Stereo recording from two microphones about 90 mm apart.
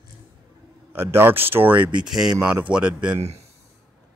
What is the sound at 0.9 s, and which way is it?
Speech, 25° right (ahead or behind).